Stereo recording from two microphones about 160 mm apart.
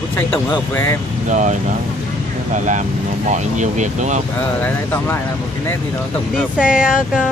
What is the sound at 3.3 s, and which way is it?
Speech, 50° right (ahead or behind).